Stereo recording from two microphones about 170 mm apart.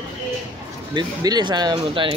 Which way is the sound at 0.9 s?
25° right (ahead or behind).